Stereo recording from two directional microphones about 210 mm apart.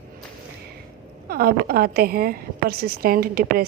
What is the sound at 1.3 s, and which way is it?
A woman's voice, 45° right (ahead or behind).